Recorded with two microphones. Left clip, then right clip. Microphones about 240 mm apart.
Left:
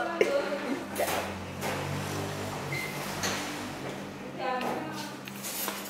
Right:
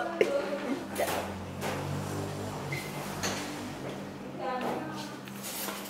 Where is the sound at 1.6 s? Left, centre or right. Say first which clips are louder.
Left 2 dB; centre.